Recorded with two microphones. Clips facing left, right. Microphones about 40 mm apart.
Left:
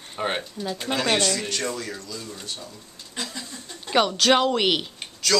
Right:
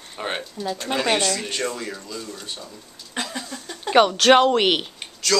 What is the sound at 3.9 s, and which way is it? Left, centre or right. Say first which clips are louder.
Speech: right 5 dB; centre.